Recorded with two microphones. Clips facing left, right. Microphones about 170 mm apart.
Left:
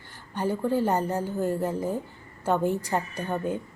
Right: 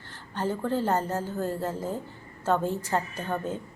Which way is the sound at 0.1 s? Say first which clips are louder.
Left 2 dB; 10° left (ahead or behind).